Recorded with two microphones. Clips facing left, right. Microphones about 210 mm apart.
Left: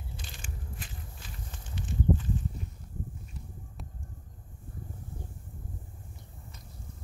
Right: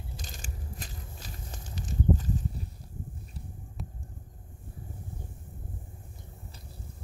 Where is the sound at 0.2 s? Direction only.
40° right (ahead or behind).